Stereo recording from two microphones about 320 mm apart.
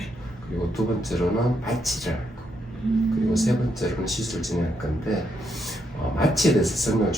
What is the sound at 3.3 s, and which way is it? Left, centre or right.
Speech, centre.